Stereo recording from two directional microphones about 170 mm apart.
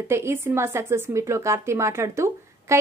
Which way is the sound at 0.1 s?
15° right (ahead or behind).